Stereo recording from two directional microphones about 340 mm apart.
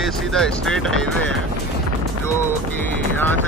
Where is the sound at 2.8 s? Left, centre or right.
Centre.